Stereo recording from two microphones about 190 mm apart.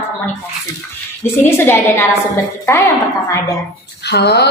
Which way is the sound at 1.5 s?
10° left (ahead or behind).